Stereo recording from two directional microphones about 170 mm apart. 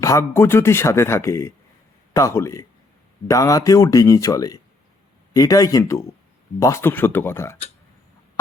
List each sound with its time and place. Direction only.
0.0 s speech: 15° left (ahead or behind)